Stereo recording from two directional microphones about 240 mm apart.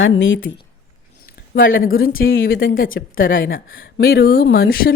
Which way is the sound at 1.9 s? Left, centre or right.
Left.